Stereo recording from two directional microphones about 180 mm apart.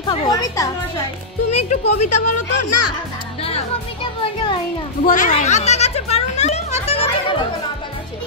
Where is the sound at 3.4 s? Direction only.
30° left (ahead or behind).